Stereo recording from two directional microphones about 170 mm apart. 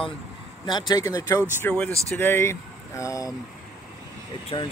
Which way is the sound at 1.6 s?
5° left (ahead or behind).